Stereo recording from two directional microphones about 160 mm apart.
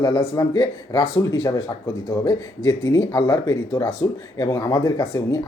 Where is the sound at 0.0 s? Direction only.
25° left (ahead or behind).